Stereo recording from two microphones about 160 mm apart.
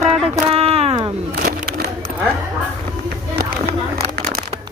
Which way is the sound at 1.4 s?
75° right (ahead or behind).